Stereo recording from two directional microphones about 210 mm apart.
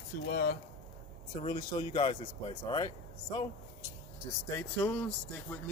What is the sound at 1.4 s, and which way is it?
Speech, 25° left (ahead or behind).